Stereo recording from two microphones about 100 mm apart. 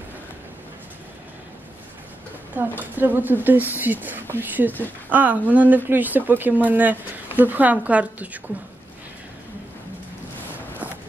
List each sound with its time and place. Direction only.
2.8 s speech: 20° right (ahead or behind)